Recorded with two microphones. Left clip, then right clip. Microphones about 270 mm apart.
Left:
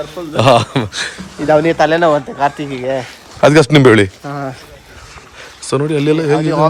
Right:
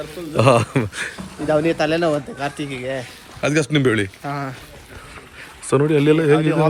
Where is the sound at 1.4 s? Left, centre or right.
Left.